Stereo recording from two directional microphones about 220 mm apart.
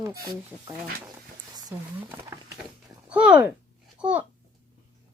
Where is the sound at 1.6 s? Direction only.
15° right (ahead or behind).